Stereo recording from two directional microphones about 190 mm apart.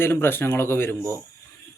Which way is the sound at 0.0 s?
10° left (ahead or behind).